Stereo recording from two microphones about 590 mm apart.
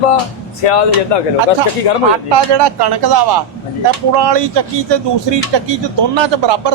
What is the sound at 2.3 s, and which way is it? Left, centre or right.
A man's voice, right.